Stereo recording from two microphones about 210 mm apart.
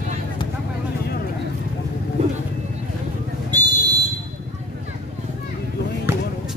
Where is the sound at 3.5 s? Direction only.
20° right (ahead or behind).